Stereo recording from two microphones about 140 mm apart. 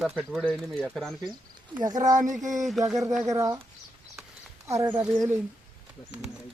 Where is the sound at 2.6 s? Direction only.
Centre (ahead or behind).